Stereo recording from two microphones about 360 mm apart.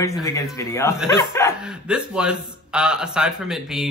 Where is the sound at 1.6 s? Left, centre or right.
Centre.